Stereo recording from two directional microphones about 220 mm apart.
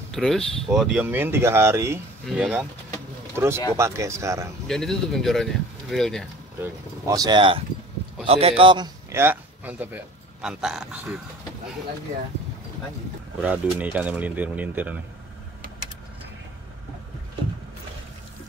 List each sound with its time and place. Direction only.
0.1 s speech: centre (ahead or behind); by 4.5 s 15° right (ahead or behind)
4.6 s speech: centre (ahead or behind)
6.6 s a man's voice: 15° right (ahead or behind)
13.4 s speech: 5° right (ahead or behind)